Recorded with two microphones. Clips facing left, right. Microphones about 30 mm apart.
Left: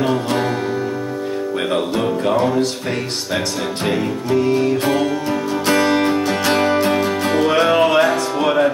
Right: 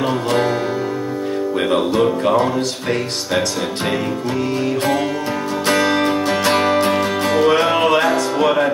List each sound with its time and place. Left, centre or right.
0.0 s music: centre
2.0 s music: centre
5.7 s music: centre
6.5 s music: right
7.3 s music: centre